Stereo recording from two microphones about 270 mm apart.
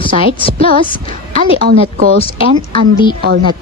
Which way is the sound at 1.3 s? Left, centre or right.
Right.